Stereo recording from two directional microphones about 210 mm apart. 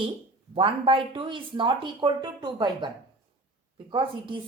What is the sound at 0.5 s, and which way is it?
Speech, 25° right (ahead or behind).